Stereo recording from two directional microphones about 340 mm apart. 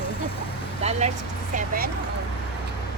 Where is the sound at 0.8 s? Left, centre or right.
Centre.